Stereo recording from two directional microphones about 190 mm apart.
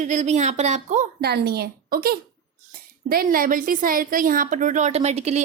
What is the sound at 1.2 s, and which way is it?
A woman's voice, 55° right (ahead or behind).